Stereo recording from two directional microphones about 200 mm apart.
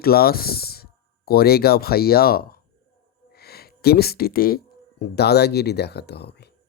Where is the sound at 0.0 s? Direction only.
50° left (ahead or behind).